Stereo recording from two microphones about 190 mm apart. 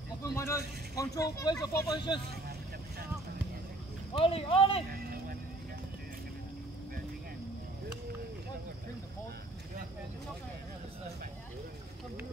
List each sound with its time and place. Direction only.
0.2 s speech: 15° left (ahead or behind)
4.1 s speech: 30° left (ahead or behind)